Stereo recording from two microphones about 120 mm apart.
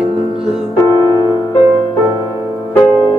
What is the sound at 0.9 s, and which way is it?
Music, 35° right (ahead or behind).